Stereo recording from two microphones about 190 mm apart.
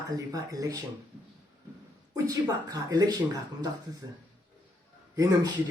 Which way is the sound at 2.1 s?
20° right (ahead or behind).